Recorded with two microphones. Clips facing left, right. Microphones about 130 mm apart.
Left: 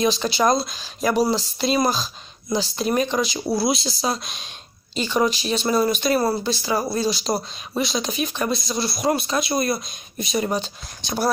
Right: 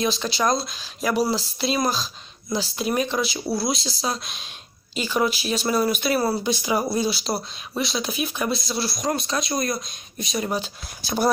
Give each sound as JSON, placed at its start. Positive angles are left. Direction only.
{"t": 0.0, "sound": "speech", "side_deg": 0}
{"t": 6.4, "sound": "speech", "side_deg": -15}
{"t": 7.1, "sound": "speech", "side_deg": 0}